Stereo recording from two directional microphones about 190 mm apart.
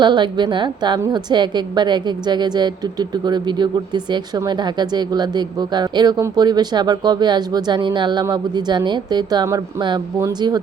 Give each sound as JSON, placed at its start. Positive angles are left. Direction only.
{"t": 0.0, "sound": "a woman's voice", "side_deg": -25}